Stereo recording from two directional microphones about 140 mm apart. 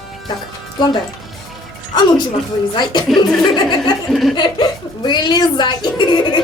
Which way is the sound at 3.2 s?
30° left (ahead or behind).